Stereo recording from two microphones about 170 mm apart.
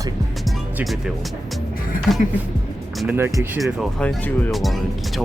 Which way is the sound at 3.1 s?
15° right (ahead or behind).